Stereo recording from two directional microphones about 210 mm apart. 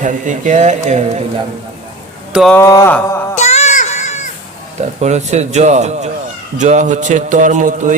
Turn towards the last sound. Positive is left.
turn(degrees=-35)  # may be behind; listen again after turning